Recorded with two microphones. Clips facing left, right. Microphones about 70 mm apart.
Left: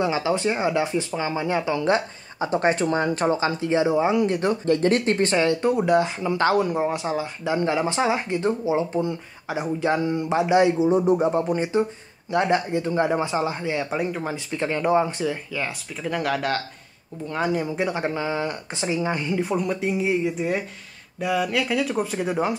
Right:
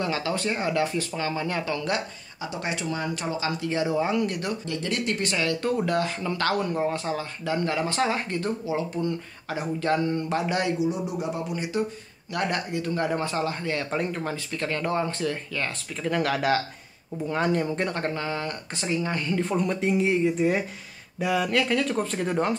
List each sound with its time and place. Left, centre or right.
0.0 s speech: centre
2.4 s speech: left
4.6 s speech: left
10.9 s speech: left; by 22.6 s centre